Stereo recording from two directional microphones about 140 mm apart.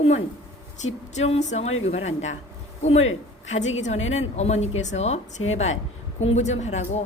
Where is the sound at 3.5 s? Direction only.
55° left (ahead or behind).